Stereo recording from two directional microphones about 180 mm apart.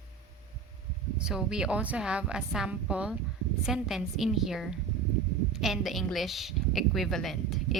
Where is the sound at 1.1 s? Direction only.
5° right (ahead or behind).